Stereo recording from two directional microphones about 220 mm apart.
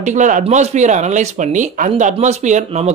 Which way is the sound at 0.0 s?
35° right (ahead or behind).